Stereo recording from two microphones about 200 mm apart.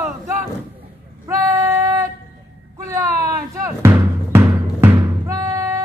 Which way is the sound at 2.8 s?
15° right (ahead or behind).